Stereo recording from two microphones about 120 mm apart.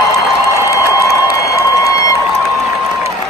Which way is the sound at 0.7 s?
25° left (ahead or behind).